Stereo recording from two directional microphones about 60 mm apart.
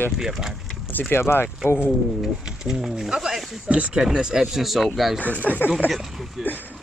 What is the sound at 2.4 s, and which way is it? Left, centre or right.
Speech, centre.